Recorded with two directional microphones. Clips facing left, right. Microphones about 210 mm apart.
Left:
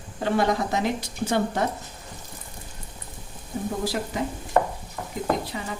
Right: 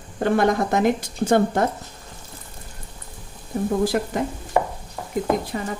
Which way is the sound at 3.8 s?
50° right (ahead or behind).